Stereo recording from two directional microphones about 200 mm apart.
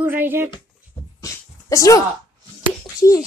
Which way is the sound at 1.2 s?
15° left (ahead or behind).